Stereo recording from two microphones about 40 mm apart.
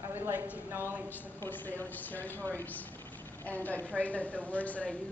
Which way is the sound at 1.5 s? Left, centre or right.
Left.